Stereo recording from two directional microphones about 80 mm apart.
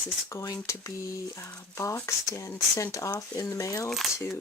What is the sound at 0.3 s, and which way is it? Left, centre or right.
Speech, left.